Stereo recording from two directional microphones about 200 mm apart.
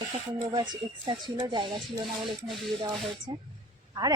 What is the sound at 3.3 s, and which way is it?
Speech, 25° right (ahead or behind).